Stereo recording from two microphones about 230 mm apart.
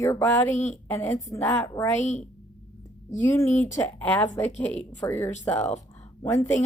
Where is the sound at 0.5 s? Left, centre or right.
Left.